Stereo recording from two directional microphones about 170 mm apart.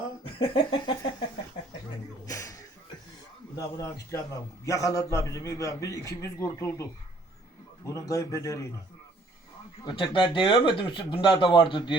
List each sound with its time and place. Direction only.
0.3 s a sound: 30° left (ahead or behind)
2.2 s music: 20° left (ahead or behind)
3.5 s a man's voice: 20° left (ahead or behind)
7.9 s speech: 20° left (ahead or behind)
9.8 s speech: 30° left (ahead or behind)